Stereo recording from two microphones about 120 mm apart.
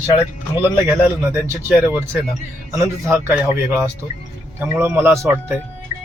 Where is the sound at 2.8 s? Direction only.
20° right (ahead or behind).